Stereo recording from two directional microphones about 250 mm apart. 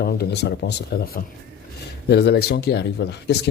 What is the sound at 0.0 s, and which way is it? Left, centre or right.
A man's voice, left.